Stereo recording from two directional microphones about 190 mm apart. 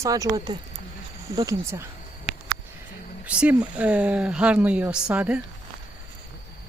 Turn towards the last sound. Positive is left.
turn(degrees=-5)  # may be behind; listen again after turning